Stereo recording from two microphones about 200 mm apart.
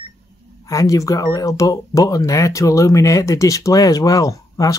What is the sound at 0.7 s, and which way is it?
Speech, 15° left (ahead or behind).